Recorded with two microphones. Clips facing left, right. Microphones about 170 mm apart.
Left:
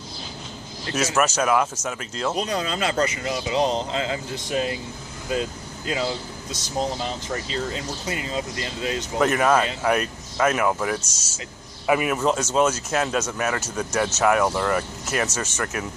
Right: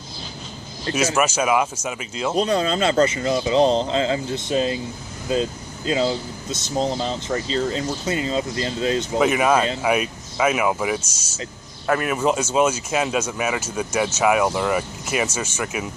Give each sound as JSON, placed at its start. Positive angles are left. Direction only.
{"t": 0.9, "sound": "speech", "side_deg": 0}
{"t": 2.3, "sound": "speech", "side_deg": -30}
{"t": 9.1, "sound": "speech", "side_deg": -10}
{"t": 11.9, "sound": "speech", "side_deg": 5}